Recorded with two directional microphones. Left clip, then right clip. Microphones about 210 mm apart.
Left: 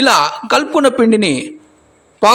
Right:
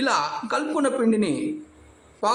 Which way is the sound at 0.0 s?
35° left (ahead or behind).